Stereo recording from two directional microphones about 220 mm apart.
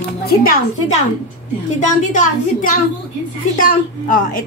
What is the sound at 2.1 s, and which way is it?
A woman's voice, 35° left (ahead or behind).